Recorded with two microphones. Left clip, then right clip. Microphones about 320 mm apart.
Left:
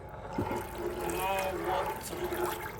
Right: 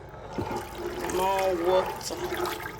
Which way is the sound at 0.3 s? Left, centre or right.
Centre.